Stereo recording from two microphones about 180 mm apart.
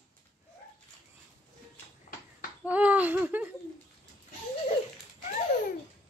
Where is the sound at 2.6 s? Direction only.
5° right (ahead or behind).